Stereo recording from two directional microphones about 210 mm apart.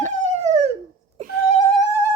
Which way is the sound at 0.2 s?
35° right (ahead or behind).